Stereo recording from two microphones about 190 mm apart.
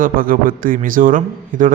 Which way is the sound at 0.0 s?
45° right (ahead or behind).